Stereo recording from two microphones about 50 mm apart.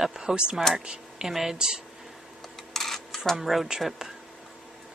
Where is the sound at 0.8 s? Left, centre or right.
Centre.